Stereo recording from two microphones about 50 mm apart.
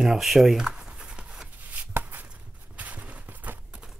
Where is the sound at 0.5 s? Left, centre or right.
Centre.